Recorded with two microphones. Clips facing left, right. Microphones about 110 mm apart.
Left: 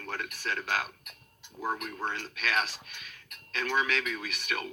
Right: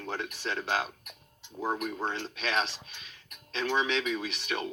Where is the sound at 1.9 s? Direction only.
25° right (ahead or behind).